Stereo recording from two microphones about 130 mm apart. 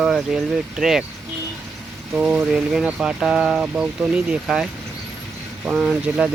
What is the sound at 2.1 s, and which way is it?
Speech, 5° right (ahead or behind).